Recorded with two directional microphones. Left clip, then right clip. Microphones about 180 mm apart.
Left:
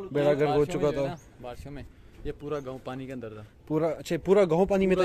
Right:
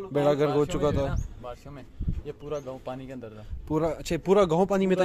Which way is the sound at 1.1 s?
40° left (ahead or behind).